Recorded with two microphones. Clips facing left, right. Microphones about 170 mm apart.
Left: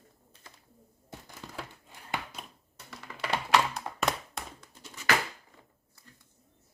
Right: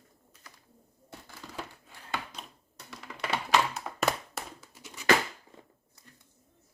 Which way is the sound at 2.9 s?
Centre (ahead or behind).